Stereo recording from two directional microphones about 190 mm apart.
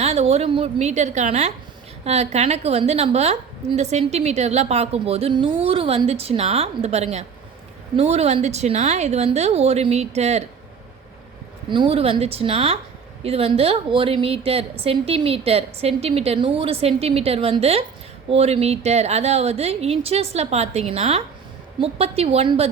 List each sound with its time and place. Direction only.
0.0 s a woman's voice: 35° right (ahead or behind)
11.7 s a woman's voice: 30° right (ahead or behind)